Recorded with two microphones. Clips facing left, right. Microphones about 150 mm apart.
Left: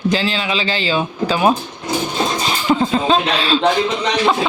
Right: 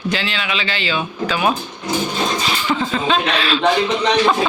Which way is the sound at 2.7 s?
35° left (ahead or behind).